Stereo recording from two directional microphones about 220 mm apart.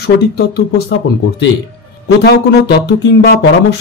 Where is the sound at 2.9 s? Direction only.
50° left (ahead or behind).